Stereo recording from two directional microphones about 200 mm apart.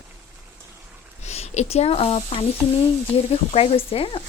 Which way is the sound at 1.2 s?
30° left (ahead or behind).